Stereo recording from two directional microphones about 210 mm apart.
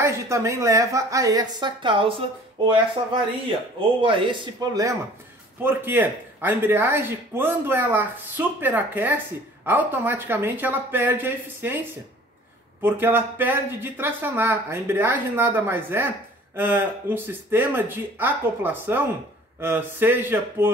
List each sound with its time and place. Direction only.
0.0 s speech: 15° right (ahead or behind)
4.0 s speech: 25° right (ahead or behind)
12.8 s speech: 10° right (ahead or behind)